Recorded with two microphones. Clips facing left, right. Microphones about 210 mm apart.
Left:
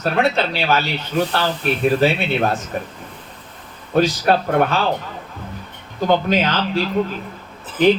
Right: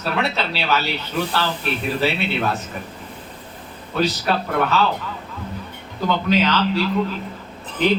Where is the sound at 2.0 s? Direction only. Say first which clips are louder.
Left 4 dB; 45° left (ahead or behind).